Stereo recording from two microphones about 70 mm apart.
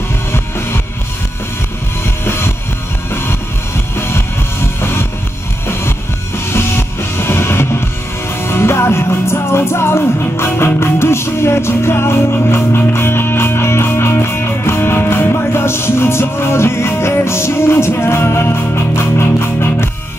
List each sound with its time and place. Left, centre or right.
0.3 s music: left
2.2 s music: left
6.5 s music: left